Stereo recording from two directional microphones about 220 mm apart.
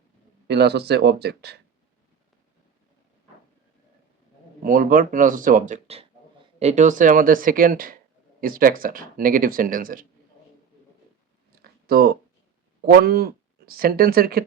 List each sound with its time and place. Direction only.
0.4 s speech: 50° right (ahead or behind)
4.6 s speech: 40° right (ahead or behind)
11.6 s a sound: 45° right (ahead or behind)
12.8 s speech: 45° right (ahead or behind)